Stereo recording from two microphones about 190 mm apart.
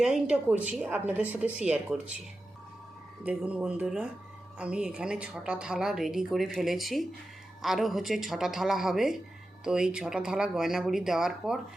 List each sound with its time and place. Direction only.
0.0 s a woman's voice: 5° right (ahead or behind)
3.2 s a woman's voice: 5° right (ahead or behind)